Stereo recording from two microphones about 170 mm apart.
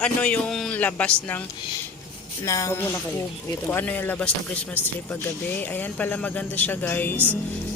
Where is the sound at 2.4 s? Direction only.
20° left (ahead or behind).